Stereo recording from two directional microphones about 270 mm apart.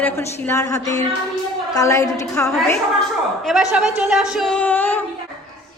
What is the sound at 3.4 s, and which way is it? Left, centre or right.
A woman's voice, centre.